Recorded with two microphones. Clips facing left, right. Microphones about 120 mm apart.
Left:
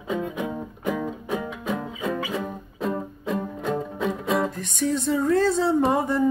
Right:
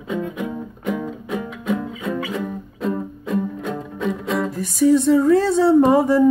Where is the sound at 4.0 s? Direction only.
Centre (ahead or behind).